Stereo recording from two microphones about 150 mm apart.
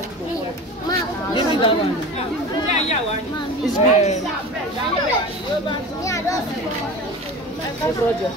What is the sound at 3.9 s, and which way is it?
Speech, 50° left (ahead or behind).